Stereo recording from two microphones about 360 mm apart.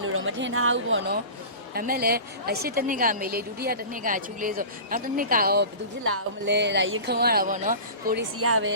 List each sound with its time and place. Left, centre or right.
0.0 s a woman's voice: right
8.4 s speech: right